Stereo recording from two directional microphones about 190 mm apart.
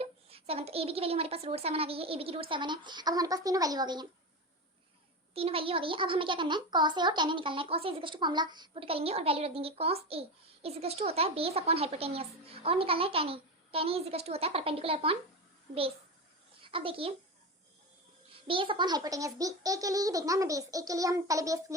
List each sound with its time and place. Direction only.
0.0 s a child's voice: 30° right (ahead or behind)
5.3 s a child's voice: 30° right (ahead or behind)
16.6 s a child's voice: 25° right (ahead or behind)
18.4 s a child's voice: 25° right (ahead or behind)